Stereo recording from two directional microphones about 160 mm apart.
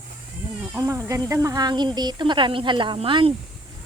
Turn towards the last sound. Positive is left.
turn(degrees=-35)  # may be behind; listen again after turning